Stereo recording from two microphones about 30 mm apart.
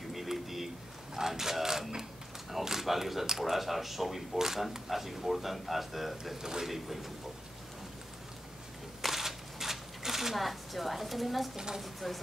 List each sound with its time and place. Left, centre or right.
0.1 s a sound: centre
1.1 s speech: centre
6.3 s speech: centre
6.6 s speech: centre
9.1 s a sound: centre
11.5 s speech: right
11.8 s speech: centre